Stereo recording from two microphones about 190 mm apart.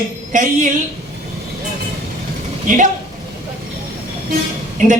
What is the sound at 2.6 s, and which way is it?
Speech, 45° right (ahead or behind).